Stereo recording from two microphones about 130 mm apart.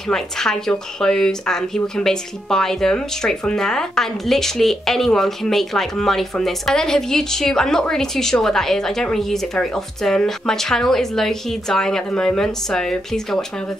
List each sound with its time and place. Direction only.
0.1 s speech: 5° left (ahead or behind)